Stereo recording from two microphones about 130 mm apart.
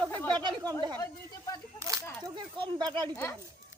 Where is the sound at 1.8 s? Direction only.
25° right (ahead or behind).